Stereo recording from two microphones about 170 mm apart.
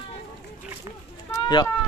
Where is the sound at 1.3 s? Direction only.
25° left (ahead or behind).